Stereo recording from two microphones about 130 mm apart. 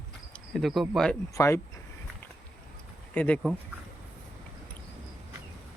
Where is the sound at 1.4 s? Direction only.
20° left (ahead or behind).